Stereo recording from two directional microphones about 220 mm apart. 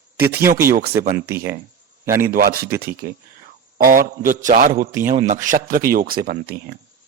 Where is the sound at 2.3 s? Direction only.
40° right (ahead or behind).